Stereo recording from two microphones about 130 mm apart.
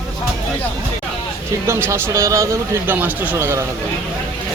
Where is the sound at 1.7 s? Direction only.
20° right (ahead or behind).